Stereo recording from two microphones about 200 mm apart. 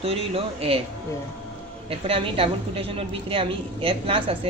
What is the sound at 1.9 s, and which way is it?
A woman's voice, 30° right (ahead or behind).